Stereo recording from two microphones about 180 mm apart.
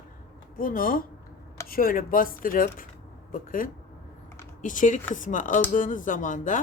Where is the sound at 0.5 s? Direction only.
50° left (ahead or behind).